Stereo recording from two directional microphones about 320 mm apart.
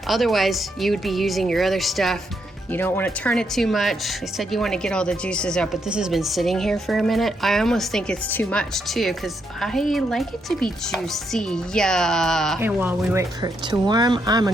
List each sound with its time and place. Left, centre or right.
0.1 s a woman's voice: centre